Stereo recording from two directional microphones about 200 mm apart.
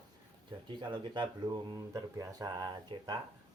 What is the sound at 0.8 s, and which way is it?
Speech, 25° right (ahead or behind).